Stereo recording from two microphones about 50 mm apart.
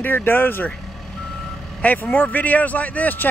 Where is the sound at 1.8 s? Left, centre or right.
Left.